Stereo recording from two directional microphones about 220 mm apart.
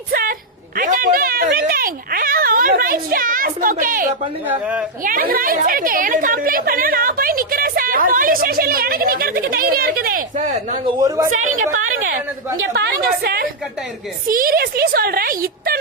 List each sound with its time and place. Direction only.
0.1 s a sound: 40° right (ahead or behind)
0.8 s cat: 35° right (ahead or behind)
4.6 s speech: 5° right (ahead or behind)
5.0 s a woman's voice: 40° right (ahead or behind)
11.7 s a woman's voice: 70° right (ahead or behind)
12.7 s a woman's voice: 45° right (ahead or behind)